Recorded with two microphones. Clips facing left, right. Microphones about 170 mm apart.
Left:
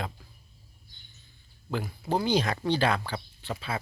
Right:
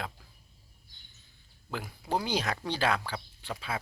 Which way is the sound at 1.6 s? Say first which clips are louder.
Left 5 dB; 5° right (ahead or behind).